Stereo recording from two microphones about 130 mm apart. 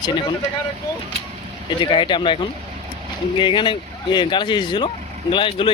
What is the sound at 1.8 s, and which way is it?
Speech, 40° left (ahead or behind).